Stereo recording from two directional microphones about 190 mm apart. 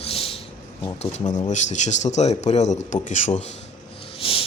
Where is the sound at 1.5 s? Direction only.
40° left (ahead or behind).